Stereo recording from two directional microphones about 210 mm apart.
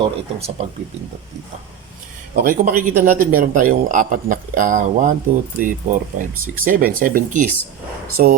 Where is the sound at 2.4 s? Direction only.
40° right (ahead or behind).